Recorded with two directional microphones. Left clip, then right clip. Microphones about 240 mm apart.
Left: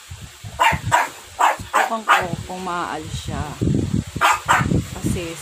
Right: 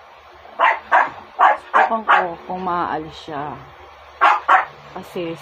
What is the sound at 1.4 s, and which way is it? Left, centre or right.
Bow-wow, left.